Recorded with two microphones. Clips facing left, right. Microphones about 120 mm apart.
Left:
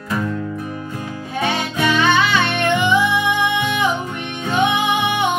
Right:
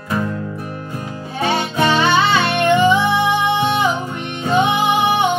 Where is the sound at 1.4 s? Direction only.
30° right (ahead or behind).